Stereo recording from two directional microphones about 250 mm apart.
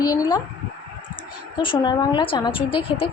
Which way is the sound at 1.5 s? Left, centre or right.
Centre.